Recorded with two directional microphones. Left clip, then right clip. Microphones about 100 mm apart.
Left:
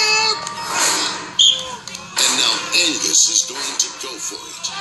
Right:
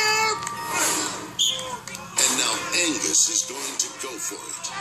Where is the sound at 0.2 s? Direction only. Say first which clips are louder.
Left 5 dB; 10° left (ahead or behind).